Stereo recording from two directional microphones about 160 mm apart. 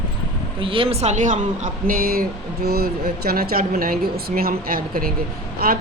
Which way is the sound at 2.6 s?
80° right.